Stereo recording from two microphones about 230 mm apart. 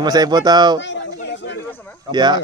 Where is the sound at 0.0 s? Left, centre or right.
Centre.